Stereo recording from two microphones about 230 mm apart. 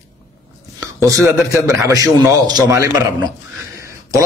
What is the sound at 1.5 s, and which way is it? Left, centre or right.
A man's voice, centre.